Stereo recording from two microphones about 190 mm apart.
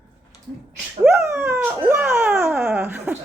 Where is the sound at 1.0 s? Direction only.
15° right (ahead or behind).